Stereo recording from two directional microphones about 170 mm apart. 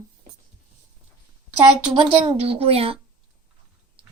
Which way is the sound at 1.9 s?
30° right (ahead or behind).